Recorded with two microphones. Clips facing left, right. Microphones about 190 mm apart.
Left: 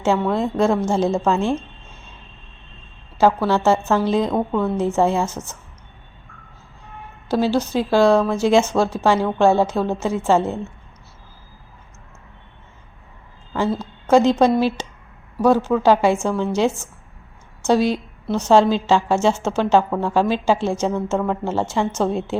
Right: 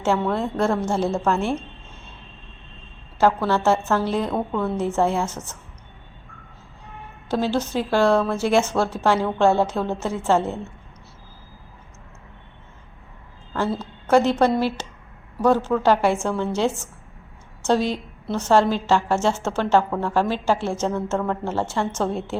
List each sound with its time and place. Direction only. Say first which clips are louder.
0.3 s a woman's voice: left 3 dB; 15° left (ahead or behind)
3.2 s a woman's voice: left 3 dB; 10° left (ahead or behind)
7.3 s a woman's voice: left 4 dB; 10° left (ahead or behind)
13.7 s a woman's voice: left 2 dB; 15° left (ahead or behind)